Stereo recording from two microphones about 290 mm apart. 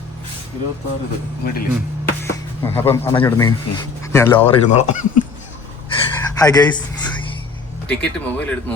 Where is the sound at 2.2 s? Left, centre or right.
Centre.